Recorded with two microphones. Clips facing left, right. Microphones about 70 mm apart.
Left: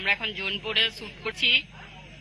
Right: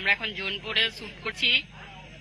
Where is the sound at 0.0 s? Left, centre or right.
Right.